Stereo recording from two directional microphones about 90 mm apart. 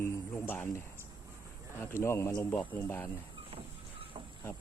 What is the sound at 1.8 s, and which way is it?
Speech, 30° left (ahead or behind).